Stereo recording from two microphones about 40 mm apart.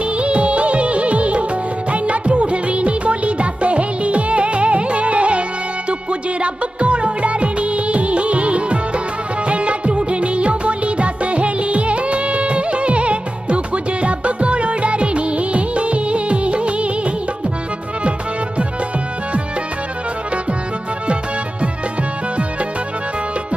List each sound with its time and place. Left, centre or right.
0.0 s music: right
14.0 s music of bollywood: right